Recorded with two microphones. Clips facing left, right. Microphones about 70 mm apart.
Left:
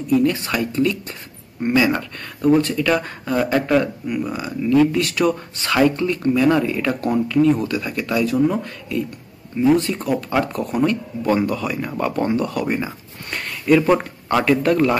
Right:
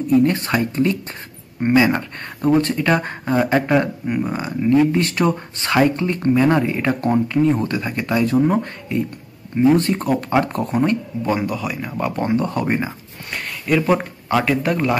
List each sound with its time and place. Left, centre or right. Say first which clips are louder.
0.2 s speech: right 2 dB; right
3.8 s speech: right 1 dB; right
9.8 s speech: right 2 dB; right
10.5 s speech: right 1 dB; right
11.3 s speech: left 2 dB; centre
12.2 s speech: right 1 dB; right
13.3 s speech: left 4 dB; centre